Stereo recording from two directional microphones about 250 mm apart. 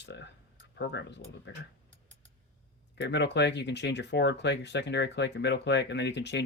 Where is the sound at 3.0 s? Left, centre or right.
Left.